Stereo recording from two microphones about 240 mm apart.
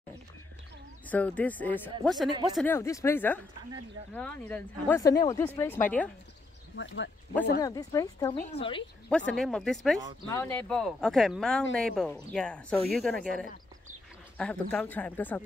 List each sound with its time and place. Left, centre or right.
1.0 s speech: centre
6.8 s speech: left
7.6 s speech: centre
8.4 s a woman's voice: left
9.1 s speech: centre